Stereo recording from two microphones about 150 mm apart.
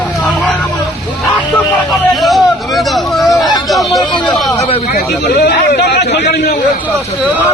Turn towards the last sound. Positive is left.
turn(degrees=90)